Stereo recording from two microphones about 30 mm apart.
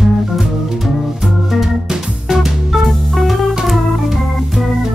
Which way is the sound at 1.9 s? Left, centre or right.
Centre.